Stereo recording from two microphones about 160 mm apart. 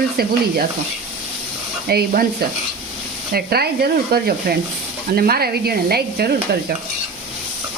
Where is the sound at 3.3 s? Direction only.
75° right (ahead or behind).